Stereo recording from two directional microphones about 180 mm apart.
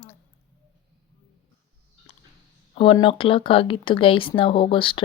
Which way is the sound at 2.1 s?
35° left (ahead or behind).